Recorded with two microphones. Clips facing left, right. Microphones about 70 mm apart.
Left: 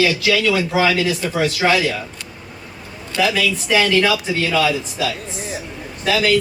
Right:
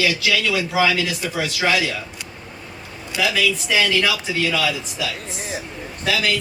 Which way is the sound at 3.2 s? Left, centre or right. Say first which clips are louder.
Left 2 dB; left.